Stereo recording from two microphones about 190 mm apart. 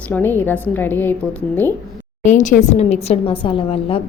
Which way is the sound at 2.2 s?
40° left (ahead or behind).